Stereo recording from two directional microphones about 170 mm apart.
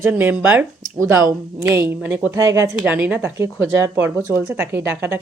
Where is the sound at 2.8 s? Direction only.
10° right (ahead or behind).